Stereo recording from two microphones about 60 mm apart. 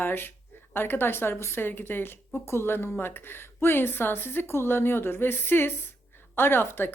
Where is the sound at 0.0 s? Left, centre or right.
Left.